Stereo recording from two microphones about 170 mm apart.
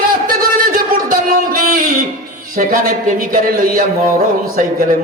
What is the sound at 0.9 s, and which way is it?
Music, 55° right (ahead or behind).